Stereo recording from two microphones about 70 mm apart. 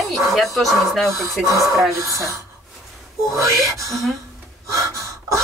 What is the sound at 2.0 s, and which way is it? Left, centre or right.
Speech, right.